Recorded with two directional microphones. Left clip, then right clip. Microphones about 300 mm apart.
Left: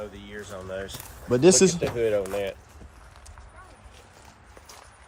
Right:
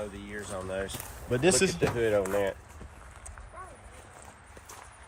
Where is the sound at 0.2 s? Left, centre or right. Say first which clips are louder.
Even; right.